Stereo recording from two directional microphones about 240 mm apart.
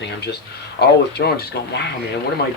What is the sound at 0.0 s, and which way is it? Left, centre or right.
Speech, left.